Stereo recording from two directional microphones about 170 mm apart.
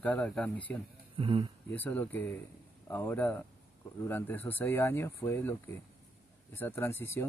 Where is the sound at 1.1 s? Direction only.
30° right (ahead or behind).